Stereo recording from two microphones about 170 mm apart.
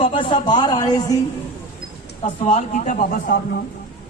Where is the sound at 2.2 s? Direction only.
40° left (ahead or behind); by 3.6 s 60° left (ahead or behind).